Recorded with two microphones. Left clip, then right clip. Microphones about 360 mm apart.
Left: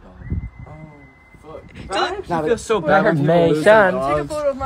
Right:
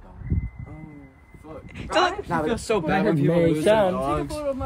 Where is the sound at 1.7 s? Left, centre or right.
Centre.